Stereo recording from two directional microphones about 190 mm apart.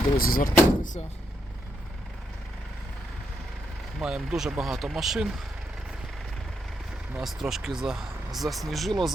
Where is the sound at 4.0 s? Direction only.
5° right (ahead or behind).